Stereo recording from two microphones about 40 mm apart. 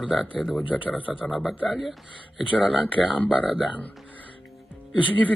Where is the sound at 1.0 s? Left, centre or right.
Right.